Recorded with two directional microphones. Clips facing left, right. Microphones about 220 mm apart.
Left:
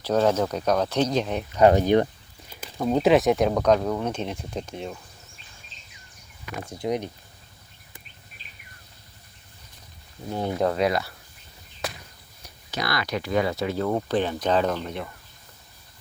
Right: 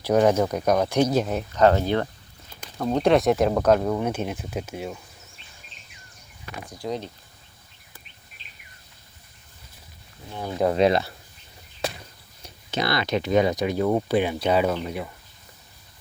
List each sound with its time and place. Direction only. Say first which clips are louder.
0.0 s speech: right 2 dB; 10° right (ahead or behind)
1.5 s speech: left 2 dB; 15° left (ahead or behind)
2.6 s speech: left 1 dB; 5° left (ahead or behind)
6.7 s speech: left 3 dB; 20° left (ahead or behind)
10.6 s speech: right 5 dB; 20° right (ahead or behind)
11.8 s a sound: right 4 dB; 25° right (ahead or behind)
12.7 s speech: right 4 dB; 25° right (ahead or behind); by 15.1 s 10° right (ahead or behind)